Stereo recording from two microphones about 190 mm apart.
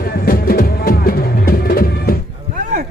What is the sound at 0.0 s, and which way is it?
Music, 55° left (ahead or behind).